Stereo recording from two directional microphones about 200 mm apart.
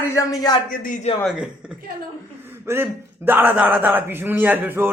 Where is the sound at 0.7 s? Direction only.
45° left (ahead or behind).